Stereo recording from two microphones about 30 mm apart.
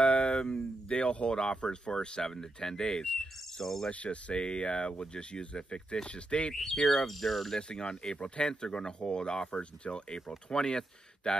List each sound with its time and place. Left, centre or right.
0.0 s a sound: left
1.3 s speech: left
2.2 s speech: centre
3.9 s speech: left
4.4 s speech: left
6.5 s speech: centre
7.5 s speech: left
10.5 s speech: left